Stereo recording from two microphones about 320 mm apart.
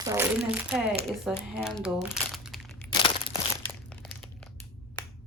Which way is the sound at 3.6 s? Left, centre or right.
Centre.